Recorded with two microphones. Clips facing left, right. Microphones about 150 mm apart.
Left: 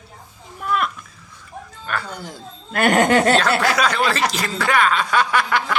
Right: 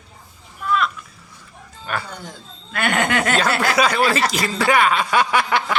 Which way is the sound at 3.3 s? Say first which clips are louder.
Left 1 dB; 10° right (ahead or behind).